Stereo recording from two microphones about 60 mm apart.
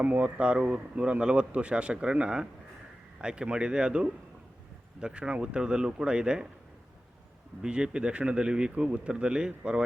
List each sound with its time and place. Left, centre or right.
0.0 s a man's voice: right
7.6 s a man's voice: centre